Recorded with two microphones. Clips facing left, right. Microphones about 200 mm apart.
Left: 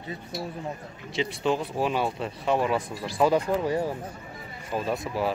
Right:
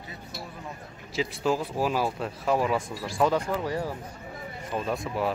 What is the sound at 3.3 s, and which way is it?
Speech, 20° left (ahead or behind).